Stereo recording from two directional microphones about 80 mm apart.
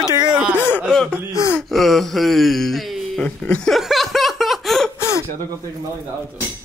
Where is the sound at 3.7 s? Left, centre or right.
Centre.